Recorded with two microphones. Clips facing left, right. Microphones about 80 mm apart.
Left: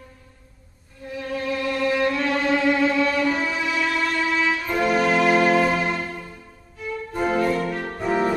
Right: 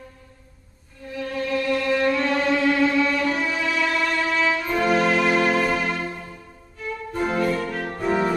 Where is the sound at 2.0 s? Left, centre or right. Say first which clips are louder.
Right 1 dB; centre.